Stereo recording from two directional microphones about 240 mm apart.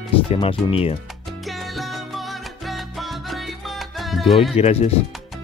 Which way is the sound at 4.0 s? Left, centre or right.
Centre.